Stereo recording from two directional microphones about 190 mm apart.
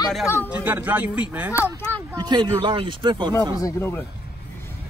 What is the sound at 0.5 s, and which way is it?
Speech, 10° right (ahead or behind).